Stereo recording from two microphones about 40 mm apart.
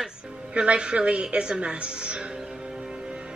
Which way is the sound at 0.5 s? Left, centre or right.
Right.